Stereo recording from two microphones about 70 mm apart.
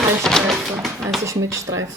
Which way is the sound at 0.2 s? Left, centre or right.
Centre.